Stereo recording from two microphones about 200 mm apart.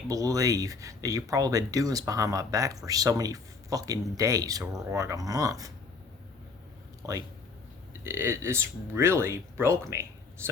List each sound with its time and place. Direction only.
0.1 s speech: 15° right (ahead or behind)
7.0 s speech: 15° right (ahead or behind)